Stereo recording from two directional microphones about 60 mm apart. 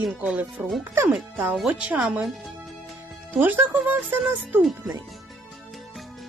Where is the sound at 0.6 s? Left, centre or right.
Right.